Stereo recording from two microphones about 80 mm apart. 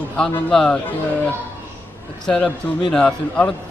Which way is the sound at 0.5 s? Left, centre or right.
Centre.